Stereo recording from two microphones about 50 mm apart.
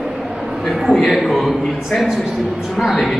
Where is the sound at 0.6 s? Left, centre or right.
Centre.